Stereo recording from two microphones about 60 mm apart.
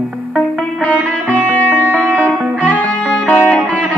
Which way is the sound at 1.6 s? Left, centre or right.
Right.